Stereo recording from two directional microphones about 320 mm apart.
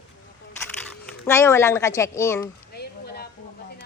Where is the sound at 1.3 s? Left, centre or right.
Centre.